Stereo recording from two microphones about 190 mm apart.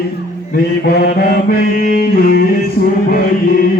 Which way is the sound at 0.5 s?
55° left (ahead or behind).